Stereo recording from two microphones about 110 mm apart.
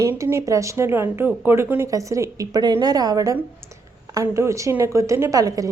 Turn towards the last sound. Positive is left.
turn(degrees=-35)  # may be behind; listen again after turning